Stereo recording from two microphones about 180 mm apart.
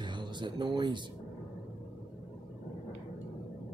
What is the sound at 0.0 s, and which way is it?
Speech, 25° right (ahead or behind).